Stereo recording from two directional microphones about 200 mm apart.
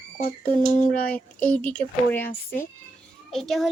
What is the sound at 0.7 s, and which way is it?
Speech, 40° left (ahead or behind).